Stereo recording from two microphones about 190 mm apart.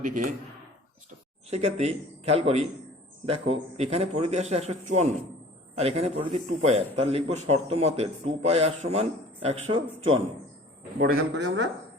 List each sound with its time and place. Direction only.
0.0 s speech: 45° right (ahead or behind)
1.5 s a man's voice: 35° right (ahead or behind)
11.0 s speech: 60° right (ahead or behind)